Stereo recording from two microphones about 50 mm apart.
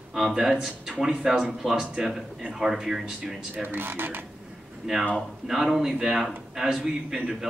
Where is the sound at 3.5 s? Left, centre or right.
Right.